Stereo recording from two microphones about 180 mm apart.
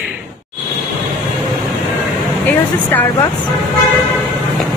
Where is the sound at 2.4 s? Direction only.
10° left (ahead or behind).